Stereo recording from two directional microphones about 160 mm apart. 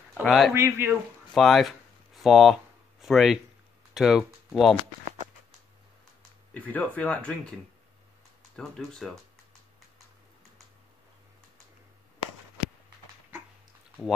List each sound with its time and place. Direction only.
0.2 s speech: 5° left (ahead or behind)
0.6 s speech: 15° right (ahead or behind)
1.3 s speech: centre (ahead or behind)
6.5 s speech: 10° left (ahead or behind)
8.5 s speech: 5° left (ahead or behind)